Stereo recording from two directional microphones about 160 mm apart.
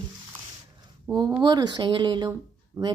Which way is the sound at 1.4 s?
25° right (ahead or behind).